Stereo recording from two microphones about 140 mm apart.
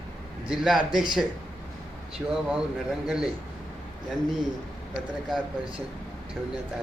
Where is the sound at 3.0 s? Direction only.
5° right (ahead or behind).